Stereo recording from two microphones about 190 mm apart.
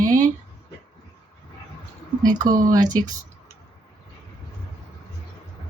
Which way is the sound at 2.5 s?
20° right (ahead or behind).